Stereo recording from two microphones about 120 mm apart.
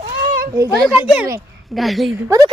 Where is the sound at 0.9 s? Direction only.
10° right (ahead or behind).